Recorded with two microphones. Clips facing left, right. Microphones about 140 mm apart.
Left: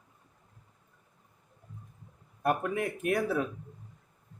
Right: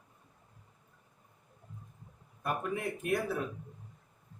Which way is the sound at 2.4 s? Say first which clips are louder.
Left 5 dB; 65° left (ahead or behind).